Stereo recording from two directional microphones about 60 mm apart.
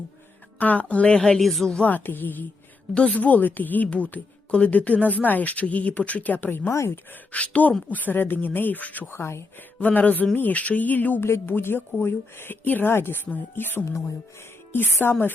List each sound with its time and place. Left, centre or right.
0.6 s speech: left
1.4 s speech: centre
1.7 s speech: left
6.7 s speech: left
7.3 s speech: left
9.1 s speech: left
9.8 s speech: left
11.2 s speech: left